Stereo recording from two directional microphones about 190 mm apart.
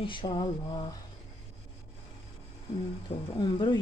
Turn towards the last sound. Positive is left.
turn(degrees=25)  # may be behind; listen again after turning